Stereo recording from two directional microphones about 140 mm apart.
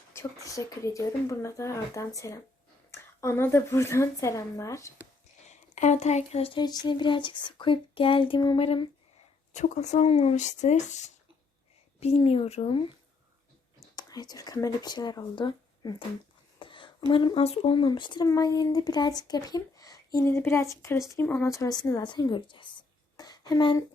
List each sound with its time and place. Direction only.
0.4 s speech: 25° left (ahead or behind)
5.5 s speech: 60° left (ahead or behind); by 8.9 s 40° left (ahead or behind)
9.5 s speech: 60° left (ahead or behind)
11.9 s speech: 45° left (ahead or behind)
13.9 s speech: 30° left (ahead or behind)
16.6 s a sound: 35° left (ahead or behind)
17.1 s speech: 40° left (ahead or behind)
23.1 s a sound: 25° left (ahead or behind)